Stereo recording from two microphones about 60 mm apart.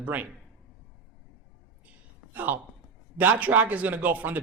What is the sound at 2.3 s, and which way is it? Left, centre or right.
A man's voice, right.